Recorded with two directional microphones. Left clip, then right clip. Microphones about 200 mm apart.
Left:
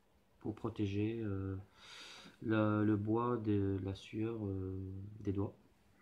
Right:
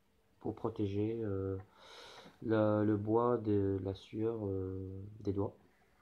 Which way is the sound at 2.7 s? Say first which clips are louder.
Right 3 dB; 15° left (ahead or behind).